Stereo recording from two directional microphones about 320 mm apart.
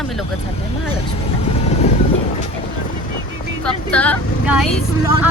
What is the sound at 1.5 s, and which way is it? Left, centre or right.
Vehicle, centre.